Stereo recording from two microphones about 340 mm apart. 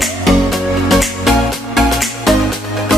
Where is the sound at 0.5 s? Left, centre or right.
Centre.